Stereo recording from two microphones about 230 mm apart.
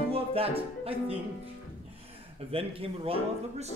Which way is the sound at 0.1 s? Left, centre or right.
Right.